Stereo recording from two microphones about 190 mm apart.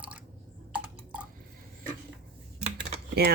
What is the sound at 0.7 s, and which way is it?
Typing, 5° right (ahead or behind).